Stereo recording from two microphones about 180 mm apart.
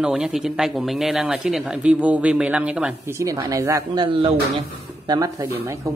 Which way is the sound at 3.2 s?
20° right (ahead or behind).